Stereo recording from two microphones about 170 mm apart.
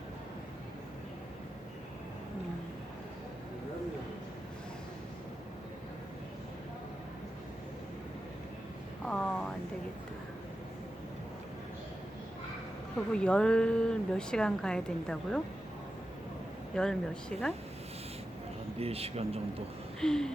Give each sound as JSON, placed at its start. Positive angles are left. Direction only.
{"t": 9.0, "sound": "a sound", "side_deg": 5}
{"t": 13.1, "sound": "a woman's voice", "side_deg": 5}
{"t": 16.7, "sound": "a woman's voice", "side_deg": 5}
{"t": 18.8, "sound": "speech", "side_deg": -35}
{"t": 20.0, "sound": "a woman's voice", "side_deg": 5}